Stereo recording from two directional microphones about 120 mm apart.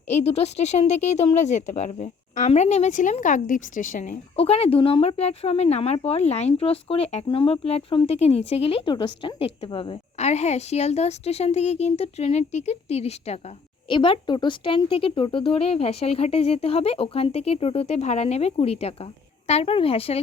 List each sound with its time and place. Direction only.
0.1 s speech: 60° left (ahead or behind); by 2.5 s 80° left
2.5 s a woman's voice: 65° left (ahead or behind); by 4.1 s 90° left
4.4 s speech: 55° left (ahead or behind)
10.2 s speech: 65° left (ahead or behind)
13.9 s speech: 45° left (ahead or behind)